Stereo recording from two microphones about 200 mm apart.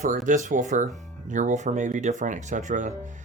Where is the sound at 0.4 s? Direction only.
40° right (ahead or behind).